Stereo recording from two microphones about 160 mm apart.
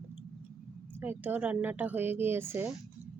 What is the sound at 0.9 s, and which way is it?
Speech, 15° right (ahead or behind).